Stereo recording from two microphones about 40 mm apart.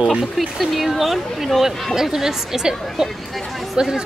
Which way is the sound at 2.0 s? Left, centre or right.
Centre.